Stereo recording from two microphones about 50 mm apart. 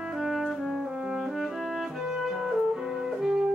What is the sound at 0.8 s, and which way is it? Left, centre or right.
Music, centre.